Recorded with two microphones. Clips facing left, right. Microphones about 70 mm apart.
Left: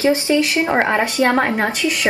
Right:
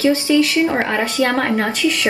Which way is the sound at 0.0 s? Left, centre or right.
Left.